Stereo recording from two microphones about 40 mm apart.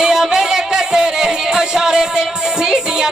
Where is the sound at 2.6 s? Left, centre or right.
Centre.